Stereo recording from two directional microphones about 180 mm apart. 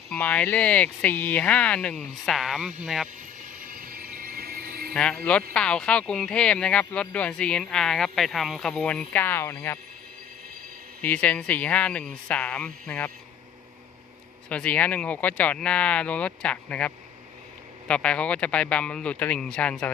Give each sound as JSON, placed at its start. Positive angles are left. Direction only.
{"t": 0.1, "sound": "speech", "side_deg": 5}
{"t": 3.6, "sound": "a sound", "side_deg": -50}
{"t": 4.9, "sound": "speech", "side_deg": 5}
{"t": 11.0, "sound": "speech", "side_deg": 10}
{"t": 14.5, "sound": "speech", "side_deg": 5}